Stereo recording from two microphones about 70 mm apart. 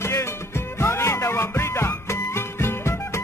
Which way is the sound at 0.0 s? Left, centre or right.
Left.